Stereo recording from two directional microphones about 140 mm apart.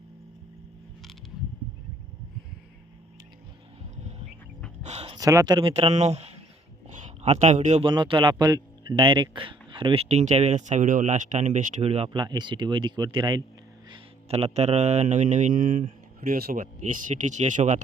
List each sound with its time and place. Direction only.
3.9 s bird: 55° right (ahead or behind)
4.8 s a sound: 50° right (ahead or behind)
5.1 s speech: 25° right (ahead or behind)
5.5 s speech: 45° right (ahead or behind)
6.8 s a sound: 55° right (ahead or behind)
7.8 s speech: 35° right (ahead or behind)
10.1 s speech: 55° right (ahead or behind); by 13.4 s 35° right (ahead or behind)
13.9 s speech: 45° right (ahead or behind); by 15.8 s 70° right (ahead or behind)
16.2 s speech: 90° right; by 17.8 s 60° right (ahead or behind)